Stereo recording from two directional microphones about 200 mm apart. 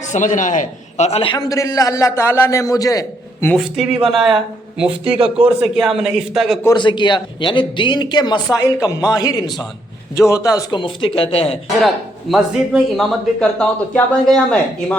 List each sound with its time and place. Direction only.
0.0 s a man's voice: 35° left (ahead or behind); by 3.5 s 15° left (ahead or behind)
3.5 s a man's voice: centre (ahead or behind)
6.6 s speech: 20° left (ahead or behind)
12.3 s a man's voice: centre (ahead or behind)